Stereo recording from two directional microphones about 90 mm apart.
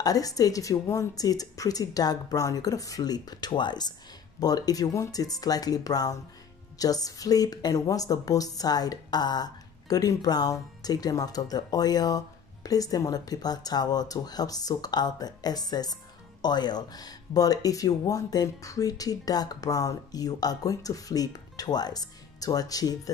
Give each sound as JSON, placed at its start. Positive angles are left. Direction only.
{"t": 0.0, "sound": "speech", "side_deg": 45}